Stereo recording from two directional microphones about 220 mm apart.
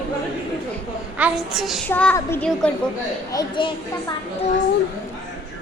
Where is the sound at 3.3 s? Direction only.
20° left (ahead or behind).